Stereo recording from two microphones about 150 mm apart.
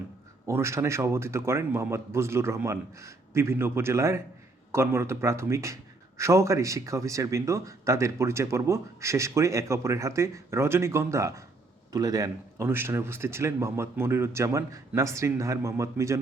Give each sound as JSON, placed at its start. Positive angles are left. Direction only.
{"t": 0.4, "sound": "a man's voice", "side_deg": -20}